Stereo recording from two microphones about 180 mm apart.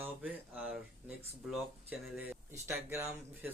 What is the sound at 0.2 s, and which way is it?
Speech, 5° right (ahead or behind).